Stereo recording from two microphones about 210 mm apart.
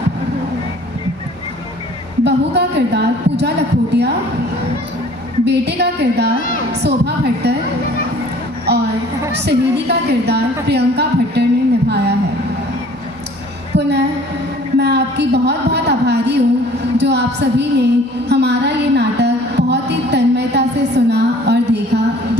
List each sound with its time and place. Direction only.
2.2 s a woman's voice: 55° right (ahead or behind)
5.5 s a woman's voice: 55° right (ahead or behind)
8.7 s a sound: 50° right (ahead or behind)
9.3 s a woman's voice: 55° right (ahead or behind)
13.7 s a woman's voice: 55° right (ahead or behind)